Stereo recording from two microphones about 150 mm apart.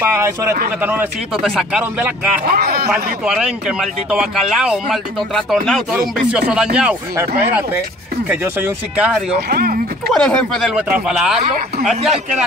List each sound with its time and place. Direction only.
0.0 s speech: 15° right (ahead or behind)
2.5 s speech: 90° right
2.9 s speech: 5° right (ahead or behind)
9.5 s speech: 90° right
10.1 s speech: 5° left (ahead or behind)